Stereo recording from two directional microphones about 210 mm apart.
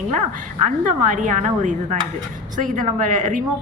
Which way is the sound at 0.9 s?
40° right (ahead or behind).